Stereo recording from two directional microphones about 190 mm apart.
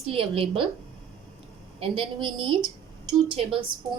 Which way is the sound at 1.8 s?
25° right (ahead or behind).